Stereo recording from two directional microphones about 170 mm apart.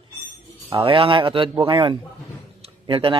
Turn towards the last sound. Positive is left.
turn(degrees=-30)  # may be behind; listen again after turning